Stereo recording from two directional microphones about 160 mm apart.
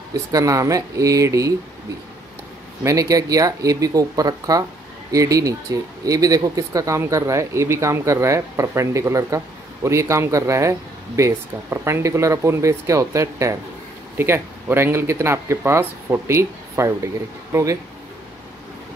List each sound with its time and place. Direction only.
0.1 s speech: 20° right (ahead or behind)
2.8 s speech: 20° right (ahead or behind)